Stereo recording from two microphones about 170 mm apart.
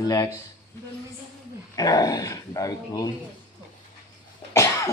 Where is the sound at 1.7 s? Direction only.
20° left (ahead or behind).